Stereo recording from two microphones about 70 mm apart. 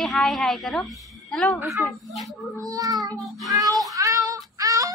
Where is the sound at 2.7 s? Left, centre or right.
Right.